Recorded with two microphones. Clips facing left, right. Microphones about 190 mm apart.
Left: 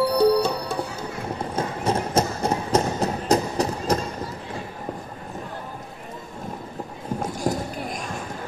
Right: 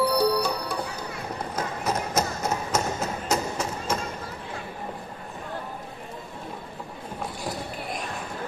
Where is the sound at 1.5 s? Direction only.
30° left (ahead or behind).